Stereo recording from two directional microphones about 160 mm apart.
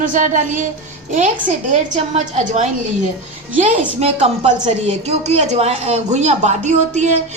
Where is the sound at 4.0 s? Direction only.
40° right (ahead or behind).